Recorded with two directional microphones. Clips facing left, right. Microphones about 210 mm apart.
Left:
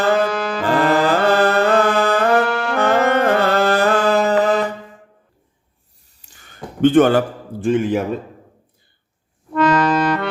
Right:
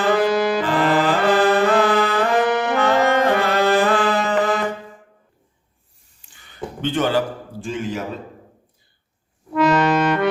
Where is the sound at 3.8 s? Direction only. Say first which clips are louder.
Left 3 dB; 40° left (ahead or behind).